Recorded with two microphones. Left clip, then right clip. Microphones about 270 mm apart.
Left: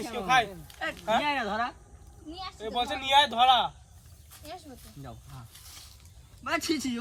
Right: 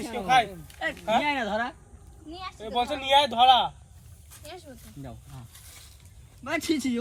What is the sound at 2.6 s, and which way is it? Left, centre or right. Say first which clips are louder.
Speech: right 3 dB; centre.